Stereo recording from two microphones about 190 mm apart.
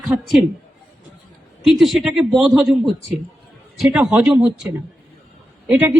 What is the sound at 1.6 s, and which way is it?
A man's voice, centre (ahead or behind).